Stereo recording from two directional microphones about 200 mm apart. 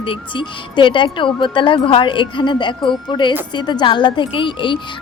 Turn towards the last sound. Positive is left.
turn(degrees=25)  # may be behind; listen again after turning